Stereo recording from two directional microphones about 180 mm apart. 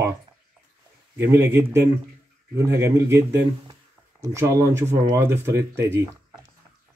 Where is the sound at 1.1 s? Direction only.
15° right (ahead or behind).